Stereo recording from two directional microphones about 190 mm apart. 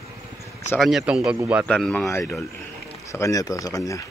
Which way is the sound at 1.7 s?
5° left (ahead or behind).